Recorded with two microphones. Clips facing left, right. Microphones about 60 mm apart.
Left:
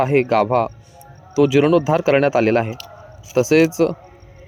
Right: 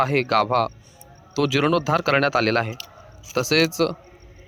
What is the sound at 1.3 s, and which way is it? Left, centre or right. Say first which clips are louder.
Speech: left 6 dB; centre.